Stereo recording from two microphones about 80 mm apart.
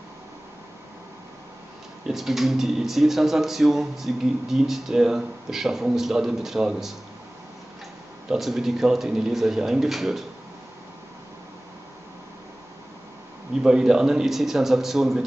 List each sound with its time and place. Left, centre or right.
2.0 s speech: centre
8.3 s speech: centre
13.6 s speech: centre